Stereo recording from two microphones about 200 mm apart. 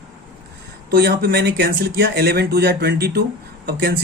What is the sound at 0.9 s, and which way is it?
Speech, 50° right (ahead or behind).